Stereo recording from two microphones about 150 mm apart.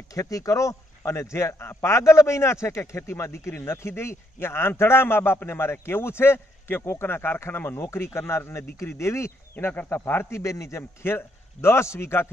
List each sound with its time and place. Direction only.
0.1 s a man's voice: 20° left (ahead or behind)